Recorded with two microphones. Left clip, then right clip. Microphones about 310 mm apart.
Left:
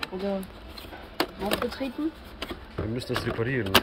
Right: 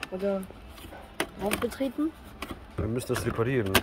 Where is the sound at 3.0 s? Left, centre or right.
Centre.